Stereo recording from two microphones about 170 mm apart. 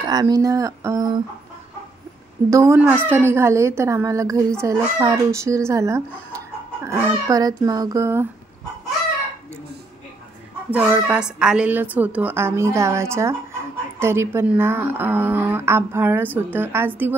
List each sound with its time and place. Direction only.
0.1 s a child's voice: 25° right (ahead or behind)
2.5 s a woman's voice: 15° right (ahead or behind)
10.7 s a woman's voice: 5° right (ahead or behind)